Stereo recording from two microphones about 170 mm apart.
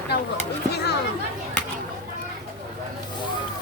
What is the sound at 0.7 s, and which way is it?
Chatter, 75° left (ahead or behind).